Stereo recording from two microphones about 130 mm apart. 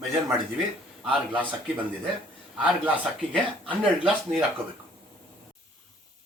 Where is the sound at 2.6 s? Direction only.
10° right (ahead or behind).